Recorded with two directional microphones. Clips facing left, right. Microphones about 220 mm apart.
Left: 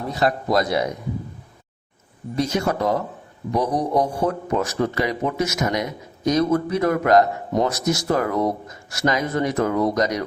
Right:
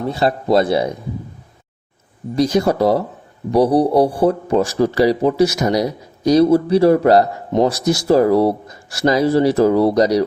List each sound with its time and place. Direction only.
0.1 s a man's voice: 30° right (ahead or behind)
2.3 s speech: 35° right (ahead or behind)